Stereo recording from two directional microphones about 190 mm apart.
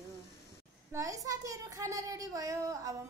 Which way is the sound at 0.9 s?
15° right (ahead or behind).